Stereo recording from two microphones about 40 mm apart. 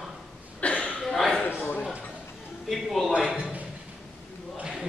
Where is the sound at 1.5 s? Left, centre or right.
Left.